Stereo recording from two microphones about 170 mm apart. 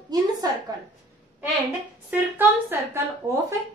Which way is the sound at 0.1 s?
25° right (ahead or behind).